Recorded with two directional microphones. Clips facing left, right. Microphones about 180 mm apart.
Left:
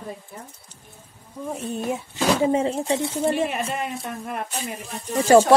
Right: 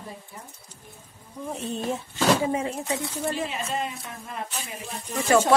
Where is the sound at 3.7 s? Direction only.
60° left (ahead or behind).